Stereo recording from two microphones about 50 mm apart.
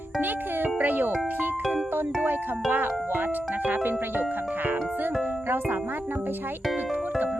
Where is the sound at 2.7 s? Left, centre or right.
Right.